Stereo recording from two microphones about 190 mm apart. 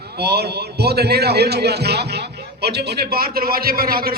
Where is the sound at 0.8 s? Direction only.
55° right (ahead or behind).